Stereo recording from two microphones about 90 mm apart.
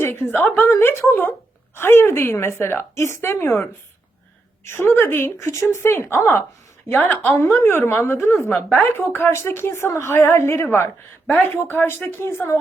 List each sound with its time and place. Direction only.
0.0 s a woman's voice: 25° left (ahead or behind)